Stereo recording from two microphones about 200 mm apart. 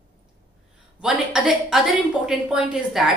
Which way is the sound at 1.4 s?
5° right (ahead or behind).